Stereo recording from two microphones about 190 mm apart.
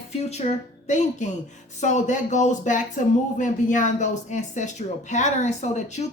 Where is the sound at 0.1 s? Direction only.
35° left (ahead or behind).